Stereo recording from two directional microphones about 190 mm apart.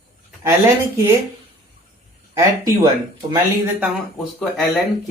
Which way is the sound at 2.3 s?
15° right (ahead or behind).